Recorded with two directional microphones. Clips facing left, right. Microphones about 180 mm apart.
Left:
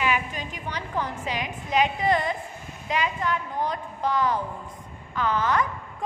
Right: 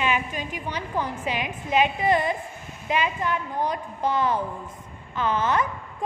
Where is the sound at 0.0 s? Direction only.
20° right (ahead or behind).